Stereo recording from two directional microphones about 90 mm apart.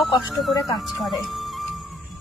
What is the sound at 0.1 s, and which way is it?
Speech, centre (ahead or behind).